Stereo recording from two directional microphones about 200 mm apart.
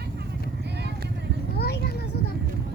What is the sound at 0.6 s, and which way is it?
Vehicle, 60° right (ahead or behind).